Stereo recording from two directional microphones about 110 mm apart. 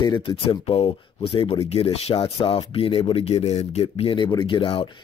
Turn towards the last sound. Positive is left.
turn(degrees=50)  # may be behind; listen again after turning